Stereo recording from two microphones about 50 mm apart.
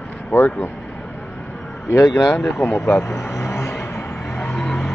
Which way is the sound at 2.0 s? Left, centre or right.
Left.